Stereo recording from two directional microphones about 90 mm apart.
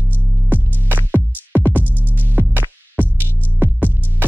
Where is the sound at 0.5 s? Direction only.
20° right (ahead or behind).